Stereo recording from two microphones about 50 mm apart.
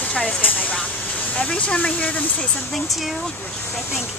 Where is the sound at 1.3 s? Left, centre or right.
Left.